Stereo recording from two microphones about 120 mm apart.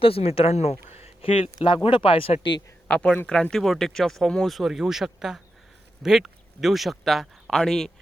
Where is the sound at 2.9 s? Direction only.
10° left (ahead or behind).